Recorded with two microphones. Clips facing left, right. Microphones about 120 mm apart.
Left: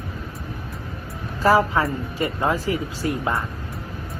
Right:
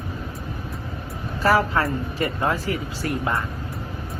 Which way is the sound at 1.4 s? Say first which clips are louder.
Left 2 dB; 20° left (ahead or behind).